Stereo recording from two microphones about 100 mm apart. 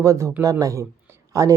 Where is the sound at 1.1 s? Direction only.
35° right (ahead or behind).